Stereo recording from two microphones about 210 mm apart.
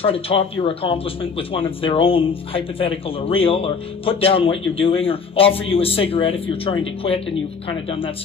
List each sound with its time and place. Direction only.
0.0 s speech: 25° left (ahead or behind)